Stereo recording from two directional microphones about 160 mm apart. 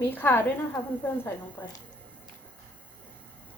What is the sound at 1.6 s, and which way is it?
Speech, 15° left (ahead or behind).